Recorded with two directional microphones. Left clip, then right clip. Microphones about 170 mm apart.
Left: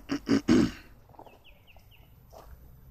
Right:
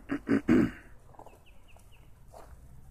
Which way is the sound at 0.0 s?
20° left (ahead or behind).